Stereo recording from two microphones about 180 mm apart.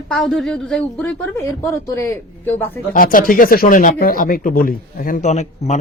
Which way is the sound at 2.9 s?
50° left (ahead or behind).